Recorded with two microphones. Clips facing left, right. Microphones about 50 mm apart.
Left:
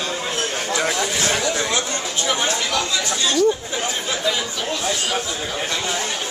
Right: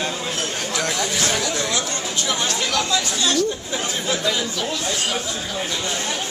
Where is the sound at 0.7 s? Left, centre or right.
Centre.